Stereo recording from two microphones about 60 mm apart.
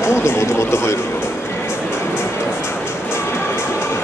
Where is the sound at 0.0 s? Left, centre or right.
Left.